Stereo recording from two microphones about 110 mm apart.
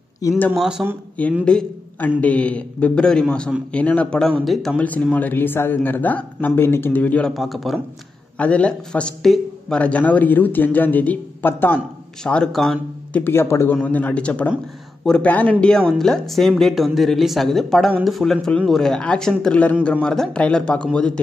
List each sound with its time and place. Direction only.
0.2 s speech: 30° left (ahead or behind)
0.6 s a woman's voice: 5° right (ahead or behind)
1.4 s a woman's voice: 10° left (ahead or behind)
4.8 s speech: 15° left (ahead or behind)
7.3 s a woman's voice: centre (ahead or behind)
8.4 s a woman's voice: 10° left (ahead or behind)
13.1 s speech: 20° left (ahead or behind)
15.9 s a woman's voice: 5° left (ahead or behind)